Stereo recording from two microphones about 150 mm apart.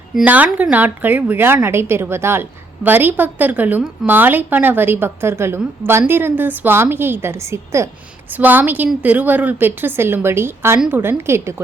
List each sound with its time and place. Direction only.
0.2 s a woman's voice: 10° right (ahead or behind)